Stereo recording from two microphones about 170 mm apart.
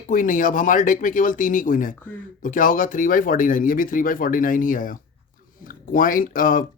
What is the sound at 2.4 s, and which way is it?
Speech, 55° left (ahead or behind).